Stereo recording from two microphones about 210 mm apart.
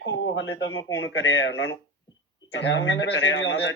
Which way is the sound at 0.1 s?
65° left (ahead or behind).